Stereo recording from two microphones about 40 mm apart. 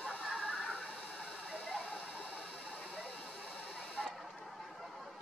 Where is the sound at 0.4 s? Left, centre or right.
Centre.